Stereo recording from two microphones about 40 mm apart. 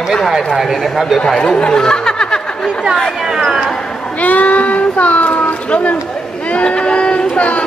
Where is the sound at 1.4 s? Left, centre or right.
Left.